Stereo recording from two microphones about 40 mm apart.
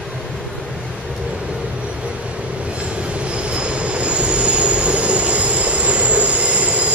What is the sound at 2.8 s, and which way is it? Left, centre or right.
Train, right.